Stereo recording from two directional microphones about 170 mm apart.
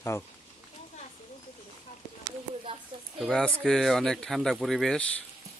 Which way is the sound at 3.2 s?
Centre (ahead or behind).